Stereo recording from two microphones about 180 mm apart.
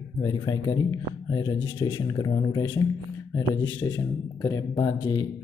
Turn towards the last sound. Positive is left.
turn(degrees=25)  # may be behind; listen again after turning